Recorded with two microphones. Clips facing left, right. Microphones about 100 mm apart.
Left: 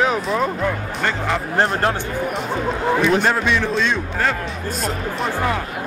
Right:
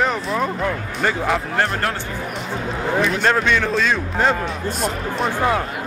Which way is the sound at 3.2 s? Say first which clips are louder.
Right 1 dB; 5° left (ahead or behind).